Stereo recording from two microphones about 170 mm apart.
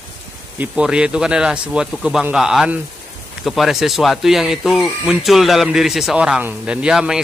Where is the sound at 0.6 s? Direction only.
5° right (ahead or behind).